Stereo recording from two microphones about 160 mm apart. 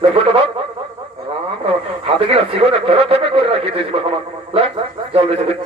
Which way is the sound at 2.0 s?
35° right (ahead or behind).